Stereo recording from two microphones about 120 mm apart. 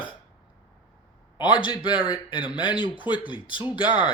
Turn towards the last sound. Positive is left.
turn(degrees=40)  # may be behind; listen again after turning